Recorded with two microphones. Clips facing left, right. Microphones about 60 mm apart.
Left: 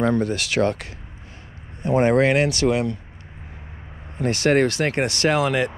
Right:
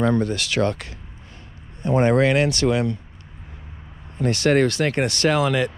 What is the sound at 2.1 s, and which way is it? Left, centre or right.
Speech, left.